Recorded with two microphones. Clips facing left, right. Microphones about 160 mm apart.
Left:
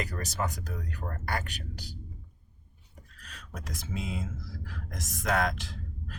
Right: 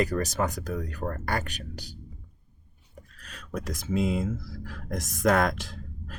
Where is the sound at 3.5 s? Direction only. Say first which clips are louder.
Right 9 dB; 45° right (ahead or behind).